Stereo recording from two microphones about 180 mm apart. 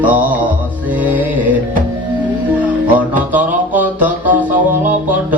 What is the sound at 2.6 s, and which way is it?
Music, 10° right (ahead or behind).